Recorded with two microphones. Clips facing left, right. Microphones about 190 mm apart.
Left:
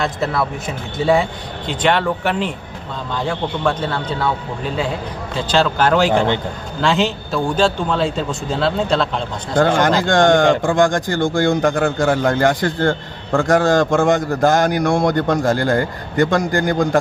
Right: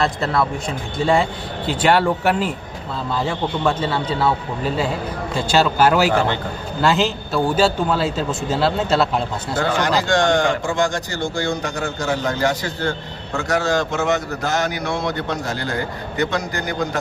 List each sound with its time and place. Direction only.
0.0 s a man's voice: centre (ahead or behind)
9.6 s speech: 50° left (ahead or behind)